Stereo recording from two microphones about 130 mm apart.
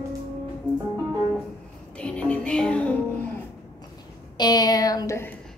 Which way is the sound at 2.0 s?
10° left (ahead or behind).